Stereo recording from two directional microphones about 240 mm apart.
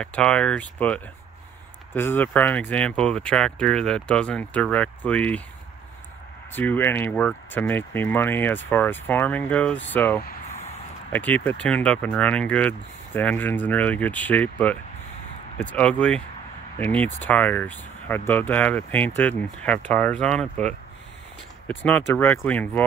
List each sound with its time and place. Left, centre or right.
0.0 s speech: centre
6.5 s speech: centre
10.2 s a sound: left
11.1 s speech: centre